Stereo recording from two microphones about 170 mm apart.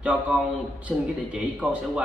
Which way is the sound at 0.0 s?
5° right (ahead or behind).